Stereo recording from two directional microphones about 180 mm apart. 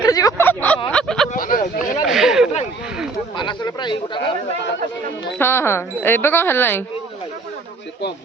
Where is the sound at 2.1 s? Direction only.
Centre (ahead or behind).